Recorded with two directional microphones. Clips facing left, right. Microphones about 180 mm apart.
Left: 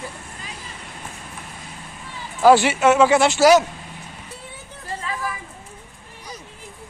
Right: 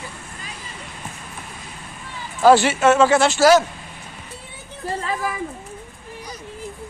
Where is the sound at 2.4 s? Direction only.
15° left (ahead or behind).